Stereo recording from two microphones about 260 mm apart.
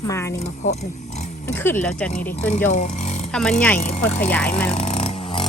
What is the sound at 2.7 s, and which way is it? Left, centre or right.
Speech, left.